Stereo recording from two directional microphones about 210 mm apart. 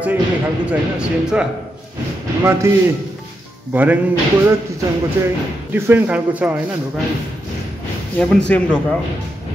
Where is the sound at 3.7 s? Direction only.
10° right (ahead or behind).